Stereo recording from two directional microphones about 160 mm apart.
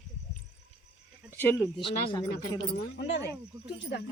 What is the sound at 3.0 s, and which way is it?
Speech, 90° left.